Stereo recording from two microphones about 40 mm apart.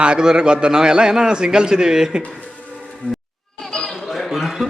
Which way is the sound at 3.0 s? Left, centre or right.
Left.